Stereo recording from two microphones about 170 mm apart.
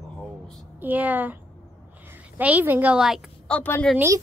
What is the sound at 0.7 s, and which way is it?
A woman's voice, 10° right (ahead or behind).